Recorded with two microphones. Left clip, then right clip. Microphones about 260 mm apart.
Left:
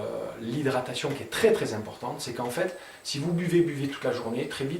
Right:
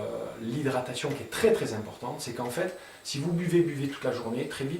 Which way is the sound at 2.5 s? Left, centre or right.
Centre.